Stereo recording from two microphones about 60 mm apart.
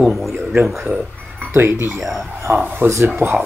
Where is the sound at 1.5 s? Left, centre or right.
Right.